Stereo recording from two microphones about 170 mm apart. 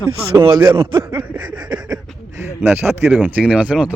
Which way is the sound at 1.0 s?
30° right (ahead or behind).